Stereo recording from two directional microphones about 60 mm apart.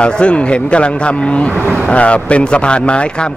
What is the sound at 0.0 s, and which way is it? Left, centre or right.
A man's voice, centre.